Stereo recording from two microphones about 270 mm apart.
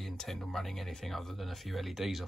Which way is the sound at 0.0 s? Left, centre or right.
Centre.